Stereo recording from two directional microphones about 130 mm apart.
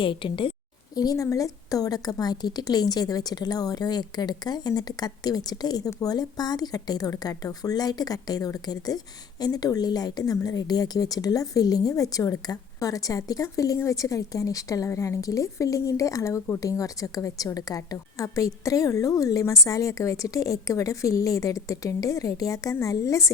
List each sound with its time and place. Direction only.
0.0 s a woman's voice: 40° left (ahead or behind)
0.9 s a woman's voice: 30° left (ahead or behind)